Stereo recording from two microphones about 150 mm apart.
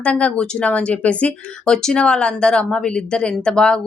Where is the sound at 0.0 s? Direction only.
10° left (ahead or behind).